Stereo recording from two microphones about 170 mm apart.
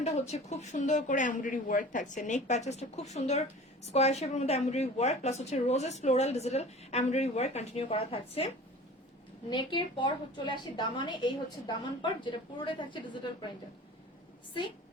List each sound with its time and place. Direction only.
0.3 s speech: 40° left (ahead or behind)
9.5 s a woman's voice: 25° left (ahead or behind)